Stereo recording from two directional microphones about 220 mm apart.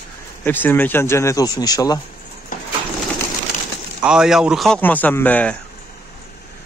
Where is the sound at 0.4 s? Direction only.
10° left (ahead or behind).